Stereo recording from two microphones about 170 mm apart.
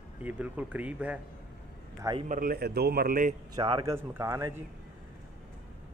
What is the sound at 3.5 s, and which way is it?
Speech, 25° right (ahead or behind).